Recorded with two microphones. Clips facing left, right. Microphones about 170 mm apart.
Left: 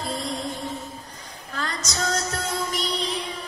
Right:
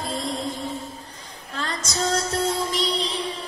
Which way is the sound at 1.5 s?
30° right (ahead or behind).